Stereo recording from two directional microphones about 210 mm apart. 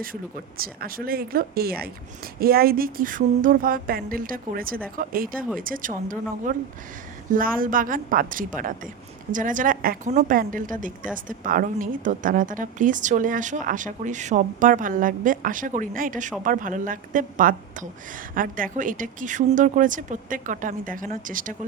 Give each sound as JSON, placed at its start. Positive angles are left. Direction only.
{"t": 0.0, "sound": "a woman's voice", "side_deg": -45}